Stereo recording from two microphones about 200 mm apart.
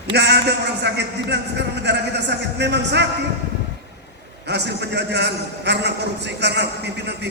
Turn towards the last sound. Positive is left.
turn(degrees=-55)  # may be behind; listen again after turning